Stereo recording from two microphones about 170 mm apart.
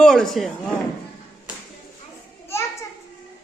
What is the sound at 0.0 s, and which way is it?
Speech, centre (ahead or behind).